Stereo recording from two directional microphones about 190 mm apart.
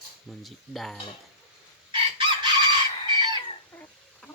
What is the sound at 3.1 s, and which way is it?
Fowl, 25° right (ahead or behind).